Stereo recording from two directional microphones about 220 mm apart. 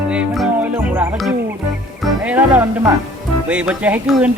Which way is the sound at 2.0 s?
5° right (ahead or behind).